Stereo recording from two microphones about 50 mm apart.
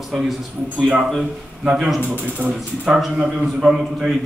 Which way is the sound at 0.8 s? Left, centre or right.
Centre.